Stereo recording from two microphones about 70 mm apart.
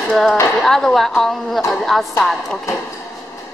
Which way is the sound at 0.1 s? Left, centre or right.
Centre.